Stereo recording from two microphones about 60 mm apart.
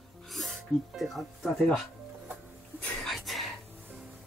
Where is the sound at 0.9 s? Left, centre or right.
Centre.